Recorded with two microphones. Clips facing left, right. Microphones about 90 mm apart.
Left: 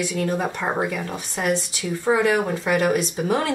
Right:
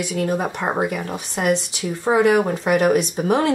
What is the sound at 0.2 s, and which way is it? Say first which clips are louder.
Speech: right 4 dB; 15° right (ahead or behind).